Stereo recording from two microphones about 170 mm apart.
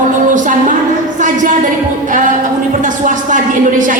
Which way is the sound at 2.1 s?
50° right (ahead or behind).